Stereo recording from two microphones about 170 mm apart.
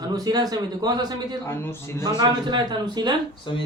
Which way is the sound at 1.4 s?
15° left (ahead or behind).